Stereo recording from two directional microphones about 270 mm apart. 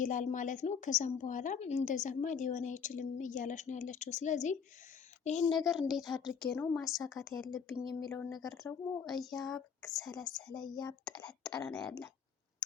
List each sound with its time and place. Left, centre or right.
0.0 s a woman's voice: left
5.5 s speech: centre
7.9 s a woman's voice: centre
8.4 s speech: centre
10.6 s a woman's voice: centre
11.0 s speech: centre